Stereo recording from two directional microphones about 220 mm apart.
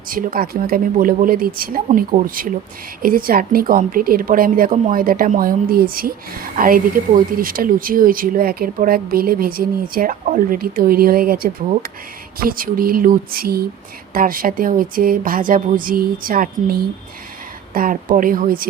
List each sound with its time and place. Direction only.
0.1 s a woman's voice: 40° right (ahead or behind)